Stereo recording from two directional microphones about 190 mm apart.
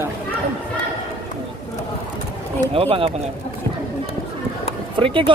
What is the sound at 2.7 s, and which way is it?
Speech, 30° right (ahead or behind).